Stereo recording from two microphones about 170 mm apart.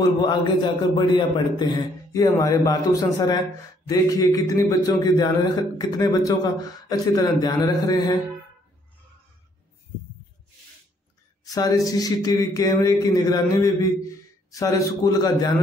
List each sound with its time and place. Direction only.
0.0 s a man's voice: 25° left (ahead or behind)
11.4 s a man's voice: 20° left (ahead or behind)